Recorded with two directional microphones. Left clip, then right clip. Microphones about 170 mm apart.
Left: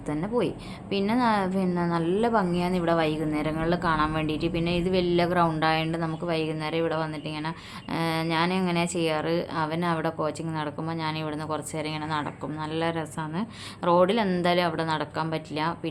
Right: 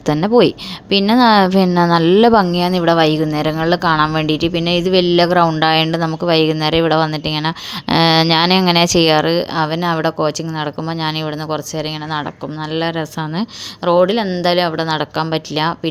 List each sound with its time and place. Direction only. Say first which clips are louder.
0.0 s a woman's voice: right 15 dB; 50° right (ahead or behind)
12.7 s a woman's voice: right 10 dB; 40° right (ahead or behind)